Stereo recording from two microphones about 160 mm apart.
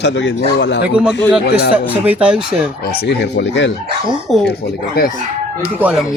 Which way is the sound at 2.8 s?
80° left.